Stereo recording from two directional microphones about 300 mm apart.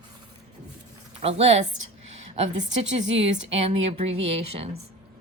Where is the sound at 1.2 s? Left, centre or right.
Right.